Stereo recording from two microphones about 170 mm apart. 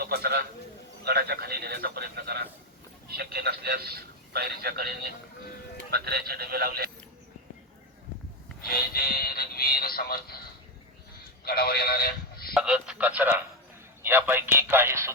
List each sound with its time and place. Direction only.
0.0 s a man's voice: 70° right (ahead or behind)
8.7 s speech: 65° left (ahead or behind)
11.4 s speech: 65° left (ahead or behind)
12.5 s speech: 5° right (ahead or behind)